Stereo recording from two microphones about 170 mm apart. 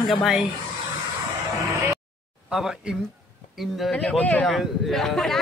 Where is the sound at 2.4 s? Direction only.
5° right (ahead or behind).